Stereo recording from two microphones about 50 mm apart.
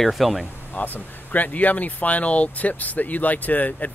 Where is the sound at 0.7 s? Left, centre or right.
Left.